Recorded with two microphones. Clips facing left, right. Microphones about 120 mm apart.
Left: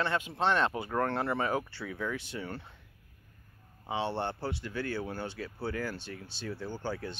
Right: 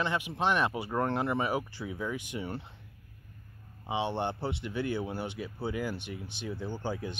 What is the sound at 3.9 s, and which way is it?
Speech, 15° right (ahead or behind).